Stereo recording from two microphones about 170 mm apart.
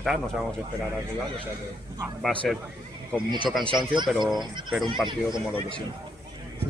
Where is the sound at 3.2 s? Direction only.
25° right (ahead or behind).